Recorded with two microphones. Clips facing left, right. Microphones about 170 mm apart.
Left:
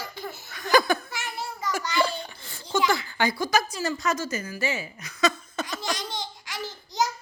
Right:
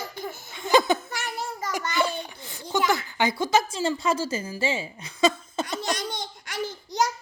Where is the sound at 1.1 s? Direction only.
45° right (ahead or behind).